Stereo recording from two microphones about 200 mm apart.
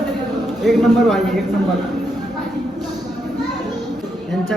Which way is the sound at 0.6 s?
Centre (ahead or behind).